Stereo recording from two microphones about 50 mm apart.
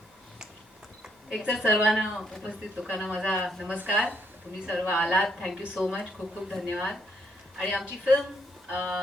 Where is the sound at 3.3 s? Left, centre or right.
Centre.